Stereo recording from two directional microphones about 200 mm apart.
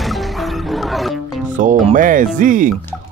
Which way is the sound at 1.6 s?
40° right (ahead or behind).